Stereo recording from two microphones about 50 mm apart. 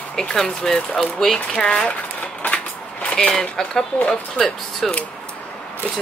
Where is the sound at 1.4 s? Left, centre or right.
Left.